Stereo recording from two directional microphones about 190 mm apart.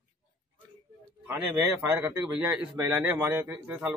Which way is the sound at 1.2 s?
5° right (ahead or behind).